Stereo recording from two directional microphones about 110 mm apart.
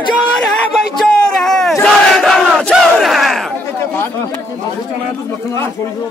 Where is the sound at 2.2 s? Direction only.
5° left (ahead or behind).